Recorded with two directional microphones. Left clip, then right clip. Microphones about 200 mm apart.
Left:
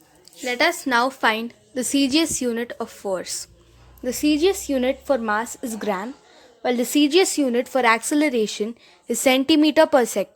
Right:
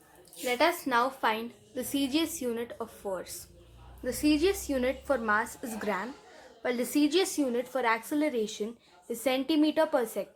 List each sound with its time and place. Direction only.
0.4 s a woman's voice: 35° left (ahead or behind)